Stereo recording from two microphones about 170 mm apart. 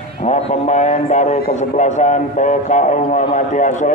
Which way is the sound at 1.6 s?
45° left (ahead or behind).